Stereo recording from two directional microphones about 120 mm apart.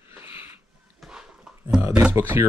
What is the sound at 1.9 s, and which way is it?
Speech, 10° right (ahead or behind).